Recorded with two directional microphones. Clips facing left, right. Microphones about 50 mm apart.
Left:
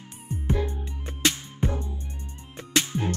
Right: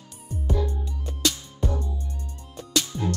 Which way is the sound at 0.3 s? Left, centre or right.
Left.